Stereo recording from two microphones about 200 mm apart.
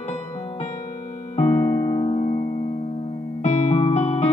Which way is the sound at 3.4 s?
35° left (ahead or behind).